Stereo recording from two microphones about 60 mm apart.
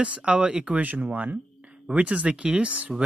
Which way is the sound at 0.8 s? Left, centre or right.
Right.